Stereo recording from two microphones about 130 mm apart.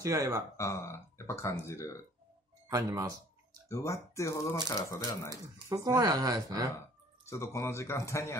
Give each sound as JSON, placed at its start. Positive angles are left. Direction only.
{"t": 0.0, "sound": "speech", "side_deg": -25}
{"t": 0.6, "sound": "speech", "side_deg": 20}
{"t": 2.7, "sound": "speech", "side_deg": -30}
{"t": 3.6, "sound": "speech", "side_deg": 25}
{"t": 5.7, "sound": "speech", "side_deg": -25}
{"t": 7.2, "sound": "speech", "side_deg": 20}